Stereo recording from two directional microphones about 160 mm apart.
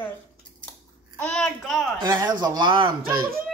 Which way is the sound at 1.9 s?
25° right (ahead or behind).